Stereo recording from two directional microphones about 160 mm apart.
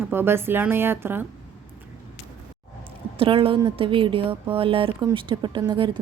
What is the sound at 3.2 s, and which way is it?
A woman's voice, 35° right (ahead or behind).